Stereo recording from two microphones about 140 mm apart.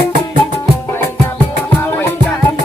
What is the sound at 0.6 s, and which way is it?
Music, 20° left (ahead or behind).